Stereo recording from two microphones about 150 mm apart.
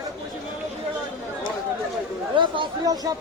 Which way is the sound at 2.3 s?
35° right (ahead or behind).